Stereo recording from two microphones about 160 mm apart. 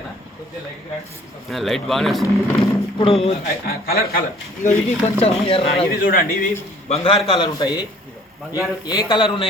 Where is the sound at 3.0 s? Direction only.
35° left (ahead or behind).